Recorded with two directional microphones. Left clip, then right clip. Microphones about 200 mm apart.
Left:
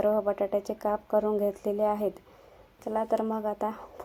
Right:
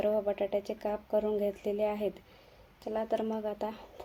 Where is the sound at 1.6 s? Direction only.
10° left (ahead or behind).